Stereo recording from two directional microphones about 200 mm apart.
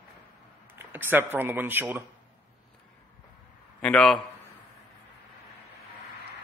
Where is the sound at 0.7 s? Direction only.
10° right (ahead or behind).